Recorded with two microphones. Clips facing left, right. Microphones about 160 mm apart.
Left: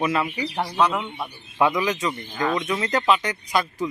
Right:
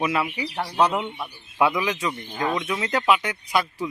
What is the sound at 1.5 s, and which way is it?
Speech, 10° right (ahead or behind).